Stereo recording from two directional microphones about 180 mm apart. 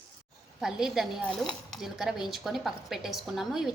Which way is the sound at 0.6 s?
5° right (ahead or behind).